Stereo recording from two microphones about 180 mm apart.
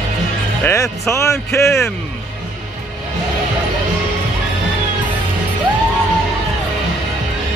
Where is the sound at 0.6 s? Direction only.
15° left (ahead or behind).